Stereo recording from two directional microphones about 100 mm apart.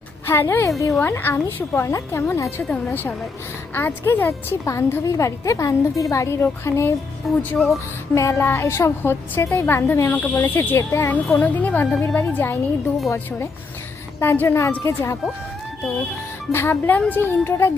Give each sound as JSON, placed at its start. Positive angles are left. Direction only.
{"t": 0.3, "sound": "a woman's voice", "side_deg": 25}
{"t": 2.6, "sound": "a woman's voice", "side_deg": 20}
{"t": 7.3, "sound": "speech", "side_deg": 0}
{"t": 8.1, "sound": "a woman's voice", "side_deg": 30}
{"t": 11.3, "sound": "speech", "side_deg": 15}
{"t": 14.2, "sound": "a woman's voice", "side_deg": 25}
{"t": 16.5, "sound": "a woman's voice", "side_deg": 25}